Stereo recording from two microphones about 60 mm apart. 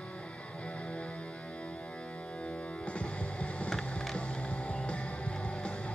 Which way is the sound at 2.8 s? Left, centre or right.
Centre.